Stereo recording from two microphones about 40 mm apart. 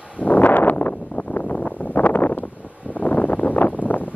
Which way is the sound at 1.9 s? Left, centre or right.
Left.